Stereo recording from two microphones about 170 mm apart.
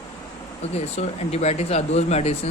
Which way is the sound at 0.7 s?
40° left (ahead or behind).